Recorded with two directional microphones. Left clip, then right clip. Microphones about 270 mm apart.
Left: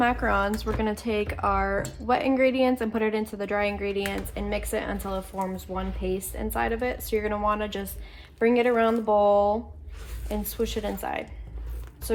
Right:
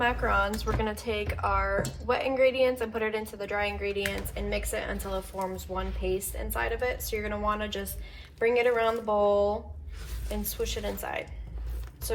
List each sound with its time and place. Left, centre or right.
0.0 s speech: left